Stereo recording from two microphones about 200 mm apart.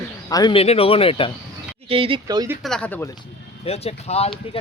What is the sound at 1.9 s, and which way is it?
Speech, 25° right (ahead or behind).